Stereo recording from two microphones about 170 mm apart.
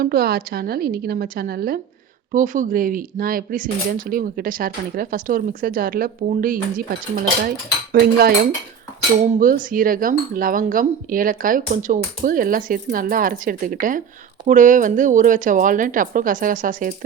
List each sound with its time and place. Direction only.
0.0 s speech: 60° right (ahead or behind)
2.3 s speech: 50° right (ahead or behind)
7.9 s speech: 65° right (ahead or behind)
9.2 s speech: 55° right (ahead or behind)